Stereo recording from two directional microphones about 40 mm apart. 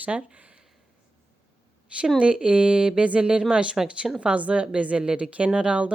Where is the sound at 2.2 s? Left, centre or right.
Right.